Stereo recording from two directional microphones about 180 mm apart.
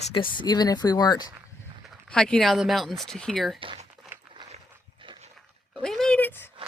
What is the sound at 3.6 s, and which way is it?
Speech, 30° right (ahead or behind).